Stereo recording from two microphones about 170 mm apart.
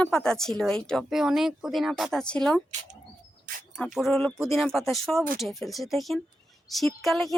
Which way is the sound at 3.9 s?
Centre (ahead or behind).